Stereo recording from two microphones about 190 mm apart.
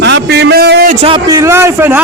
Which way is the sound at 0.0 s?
60° right (ahead or behind).